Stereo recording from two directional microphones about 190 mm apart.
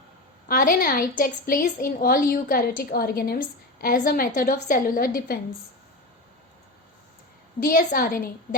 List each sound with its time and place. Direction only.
0.4 s a woman's voice: 50° left (ahead or behind)
7.6 s a woman's voice: 45° left (ahead or behind)